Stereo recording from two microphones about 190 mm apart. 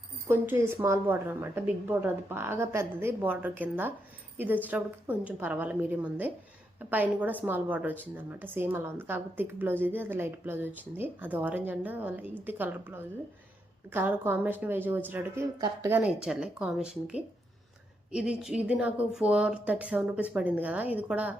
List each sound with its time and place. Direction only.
0.3 s a woman's voice: 10° right (ahead or behind)